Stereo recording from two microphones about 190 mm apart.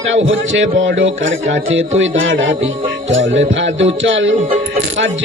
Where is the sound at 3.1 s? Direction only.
80° right.